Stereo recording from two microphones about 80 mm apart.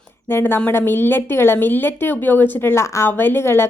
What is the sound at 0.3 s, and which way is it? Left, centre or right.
A woman's voice, left.